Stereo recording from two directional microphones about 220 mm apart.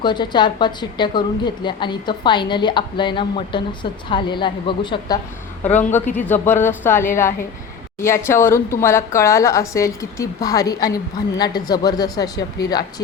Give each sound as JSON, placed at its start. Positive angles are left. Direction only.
{"t": 0.0, "sound": "a woman's voice", "side_deg": 20}
{"t": 5.7, "sound": "speech", "side_deg": 10}